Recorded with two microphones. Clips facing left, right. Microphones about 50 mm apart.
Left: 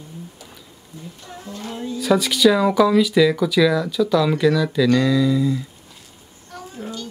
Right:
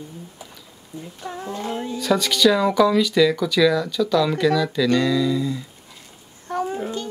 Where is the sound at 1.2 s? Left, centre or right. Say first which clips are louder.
Right 6 dB; right.